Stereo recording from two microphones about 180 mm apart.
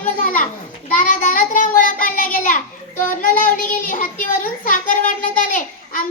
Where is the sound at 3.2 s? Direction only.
50° left (ahead or behind).